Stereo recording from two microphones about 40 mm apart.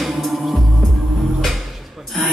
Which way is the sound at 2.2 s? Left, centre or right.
Centre.